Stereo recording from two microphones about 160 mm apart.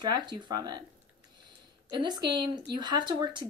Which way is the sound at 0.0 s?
25° right (ahead or behind).